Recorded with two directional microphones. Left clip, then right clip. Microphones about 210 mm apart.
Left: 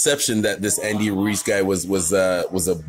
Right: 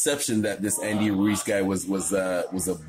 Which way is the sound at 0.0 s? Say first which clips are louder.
Left 6 dB; 40° left (ahead or behind).